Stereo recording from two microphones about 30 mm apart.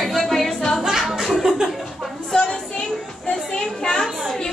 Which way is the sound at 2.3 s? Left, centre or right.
Left.